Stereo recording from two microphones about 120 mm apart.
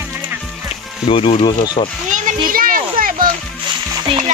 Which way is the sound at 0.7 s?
50° left (ahead or behind).